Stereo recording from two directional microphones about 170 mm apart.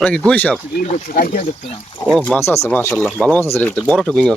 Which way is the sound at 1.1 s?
50° left (ahead or behind).